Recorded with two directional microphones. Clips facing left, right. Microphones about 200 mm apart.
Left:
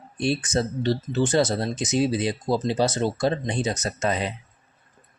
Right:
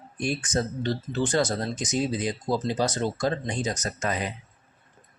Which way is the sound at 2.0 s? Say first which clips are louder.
Left 5 dB; 20° right (ahead or behind).